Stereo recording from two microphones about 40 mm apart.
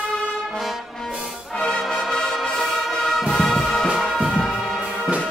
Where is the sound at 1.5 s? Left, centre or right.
Centre.